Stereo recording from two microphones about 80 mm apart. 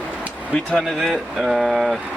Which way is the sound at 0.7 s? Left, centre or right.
Centre.